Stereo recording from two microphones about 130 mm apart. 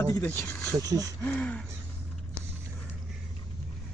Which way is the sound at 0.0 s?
25° left (ahead or behind).